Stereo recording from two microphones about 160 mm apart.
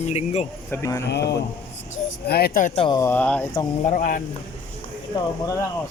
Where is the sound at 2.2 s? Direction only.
80° left.